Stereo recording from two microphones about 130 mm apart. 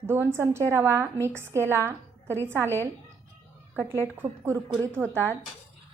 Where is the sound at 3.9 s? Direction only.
20° right (ahead or behind).